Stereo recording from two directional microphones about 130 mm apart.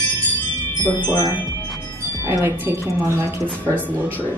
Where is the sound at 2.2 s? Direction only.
15° right (ahead or behind).